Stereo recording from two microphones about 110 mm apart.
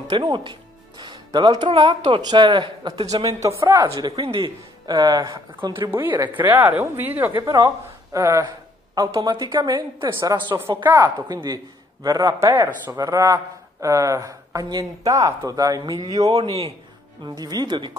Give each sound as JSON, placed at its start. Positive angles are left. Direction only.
{"t": 0.1, "sound": "speech", "side_deg": -45}
{"t": 3.1, "sound": "speech", "side_deg": -30}
{"t": 4.2, "sound": "a man's voice", "side_deg": -55}
{"t": 4.8, "sound": "speech", "side_deg": -35}
{"t": 5.3, "sound": "speech", "side_deg": -50}
{"t": 5.9, "sound": "a woman's voice", "side_deg": -20}
{"t": 7.3, "sound": "speech", "side_deg": -35}
{"t": 12.4, "sound": "speech", "side_deg": -20}
{"t": 12.9, "sound": "speech", "side_deg": -30}
{"t": 16.4, "sound": "a man's voice", "side_deg": 30}
{"t": 17.2, "sound": "speech", "side_deg": -40}